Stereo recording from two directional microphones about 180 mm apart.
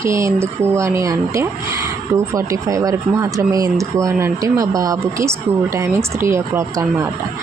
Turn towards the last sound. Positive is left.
turn(degrees=-15)  # may be behind; listen again after turning